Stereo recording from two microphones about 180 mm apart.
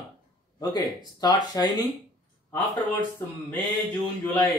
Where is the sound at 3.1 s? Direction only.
10° left (ahead or behind).